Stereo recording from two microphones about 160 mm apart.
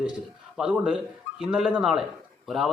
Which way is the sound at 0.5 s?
5° right (ahead or behind).